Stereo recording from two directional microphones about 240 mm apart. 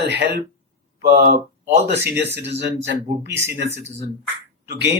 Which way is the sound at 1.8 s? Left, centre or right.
Right.